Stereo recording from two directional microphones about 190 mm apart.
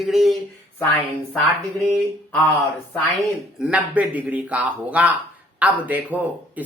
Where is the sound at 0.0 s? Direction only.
Centre (ahead or behind).